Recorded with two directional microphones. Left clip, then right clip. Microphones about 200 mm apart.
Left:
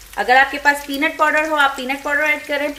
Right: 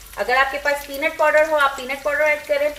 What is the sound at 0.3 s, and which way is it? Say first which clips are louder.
Speech: left 5 dB; 50° left (ahead or behind).